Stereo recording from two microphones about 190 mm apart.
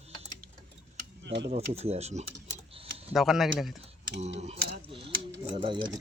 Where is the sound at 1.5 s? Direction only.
35° right (ahead or behind).